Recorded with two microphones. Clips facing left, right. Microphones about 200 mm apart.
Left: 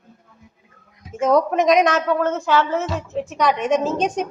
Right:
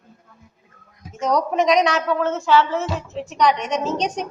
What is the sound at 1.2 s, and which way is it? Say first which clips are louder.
A woman's voice: left 3 dB; 50° left (ahead or behind).